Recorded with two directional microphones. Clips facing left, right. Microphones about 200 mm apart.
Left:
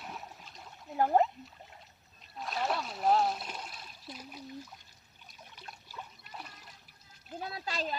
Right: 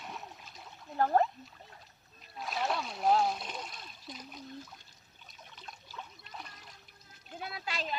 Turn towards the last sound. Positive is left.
turn(degrees=40)  # may be behind; listen again after turning